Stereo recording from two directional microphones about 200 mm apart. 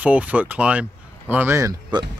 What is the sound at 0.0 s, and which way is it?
Speech, 5° right (ahead or behind).